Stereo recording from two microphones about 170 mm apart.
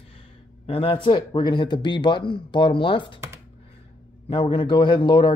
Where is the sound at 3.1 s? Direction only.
15° right (ahead or behind).